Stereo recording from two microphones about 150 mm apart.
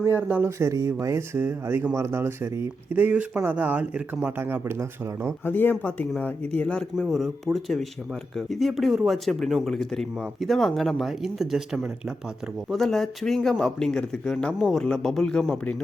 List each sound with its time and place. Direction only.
0.0 s speech: 10° right (ahead or behind)
5.5 s speech: 15° left (ahead or behind)